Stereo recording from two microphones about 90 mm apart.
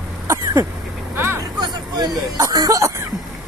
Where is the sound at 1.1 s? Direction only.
25° right (ahead or behind).